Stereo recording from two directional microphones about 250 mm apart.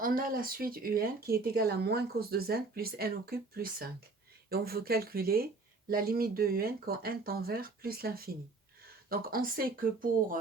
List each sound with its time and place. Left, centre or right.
0.0 s speech: right